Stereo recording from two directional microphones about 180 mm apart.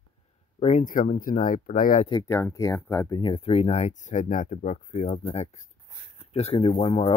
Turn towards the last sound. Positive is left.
turn(degrees=35)  # may be behind; listen again after turning